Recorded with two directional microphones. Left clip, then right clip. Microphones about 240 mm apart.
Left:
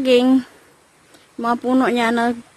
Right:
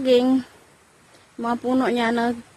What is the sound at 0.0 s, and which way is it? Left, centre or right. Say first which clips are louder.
A woman's voice: left 3 dB; centre.